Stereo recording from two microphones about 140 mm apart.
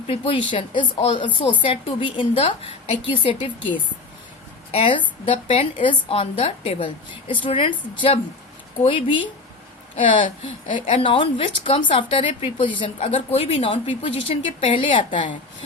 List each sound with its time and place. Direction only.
0.1 s a woman's voice: 35° left (ahead or behind)
4.7 s a woman's voice: 40° left (ahead or behind)
8.9 s a woman's voice: 35° left (ahead or behind)
10.2 s a woman's voice: 55° left (ahead or behind)
11.0 s a woman's voice: 35° left (ahead or behind)